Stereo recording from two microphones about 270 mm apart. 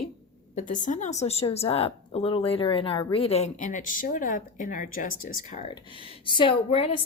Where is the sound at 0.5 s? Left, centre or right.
Left.